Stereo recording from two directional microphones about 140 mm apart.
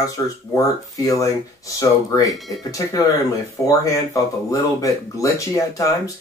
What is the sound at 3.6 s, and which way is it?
Speech, 25° left (ahead or behind).